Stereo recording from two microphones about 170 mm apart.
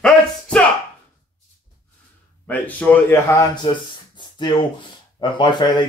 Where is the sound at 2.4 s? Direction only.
10° left (ahead or behind).